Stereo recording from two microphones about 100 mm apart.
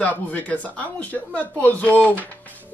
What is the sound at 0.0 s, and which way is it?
Speech, 15° left (ahead or behind).